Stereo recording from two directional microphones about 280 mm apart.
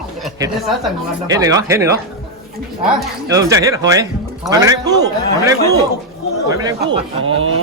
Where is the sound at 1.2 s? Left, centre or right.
Centre.